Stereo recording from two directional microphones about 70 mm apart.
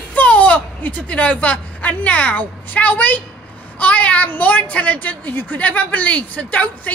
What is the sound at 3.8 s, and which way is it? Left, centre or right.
A woman's voice, centre.